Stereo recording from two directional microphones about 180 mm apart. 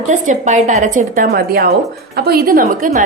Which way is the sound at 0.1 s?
45° right (ahead or behind).